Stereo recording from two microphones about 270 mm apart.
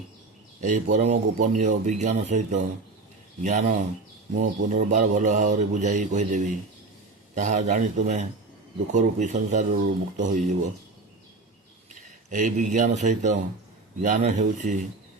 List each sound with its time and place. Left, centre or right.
0.6 s speech: right
12.3 s speech: right